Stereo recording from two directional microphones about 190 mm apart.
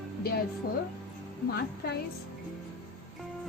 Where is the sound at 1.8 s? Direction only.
50° left (ahead or behind).